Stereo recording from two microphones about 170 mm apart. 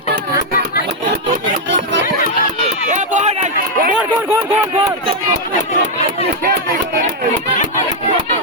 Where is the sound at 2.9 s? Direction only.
45° right (ahead or behind).